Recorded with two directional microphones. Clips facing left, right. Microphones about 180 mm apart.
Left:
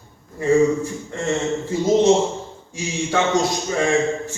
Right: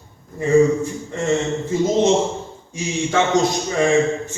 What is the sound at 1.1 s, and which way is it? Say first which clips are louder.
Speech: right 3 dB; 15° right (ahead or behind).